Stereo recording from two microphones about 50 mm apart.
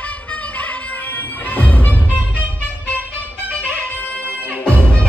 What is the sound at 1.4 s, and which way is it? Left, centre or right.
Music, left.